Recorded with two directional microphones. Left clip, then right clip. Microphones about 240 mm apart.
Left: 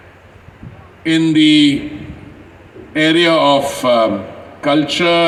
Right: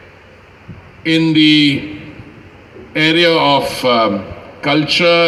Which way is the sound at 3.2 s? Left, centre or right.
Left.